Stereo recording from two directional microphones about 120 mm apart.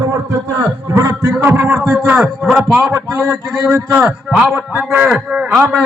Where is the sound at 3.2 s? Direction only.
20° right (ahead or behind).